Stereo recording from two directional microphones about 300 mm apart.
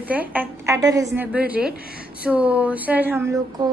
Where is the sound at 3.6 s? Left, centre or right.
Centre.